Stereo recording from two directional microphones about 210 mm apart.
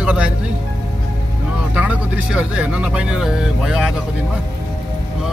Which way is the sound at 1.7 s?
5° right (ahead or behind).